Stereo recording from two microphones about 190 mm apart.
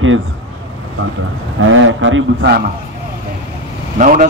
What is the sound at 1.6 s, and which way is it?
A man's voice, 90° right.